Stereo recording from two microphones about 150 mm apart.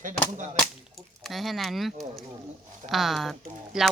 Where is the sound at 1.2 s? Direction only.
Centre (ahead or behind).